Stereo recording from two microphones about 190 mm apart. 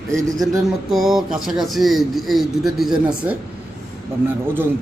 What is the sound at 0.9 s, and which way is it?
Speech, centre (ahead or behind).